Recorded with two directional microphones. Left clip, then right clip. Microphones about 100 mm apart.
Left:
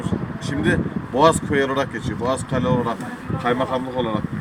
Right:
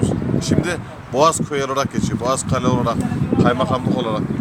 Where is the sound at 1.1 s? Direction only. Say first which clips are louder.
Even; 25° right (ahead or behind).